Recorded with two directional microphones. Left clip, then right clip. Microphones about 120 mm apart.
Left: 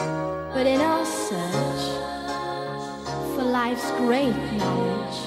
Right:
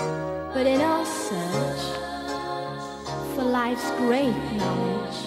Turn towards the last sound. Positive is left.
turn(degrees=30)  # may be behind; listen again after turning